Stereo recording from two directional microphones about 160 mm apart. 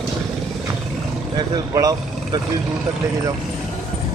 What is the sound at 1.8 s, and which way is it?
Speech, 25° right (ahead or behind).